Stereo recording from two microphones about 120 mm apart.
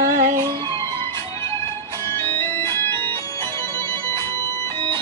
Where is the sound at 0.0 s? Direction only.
90° right.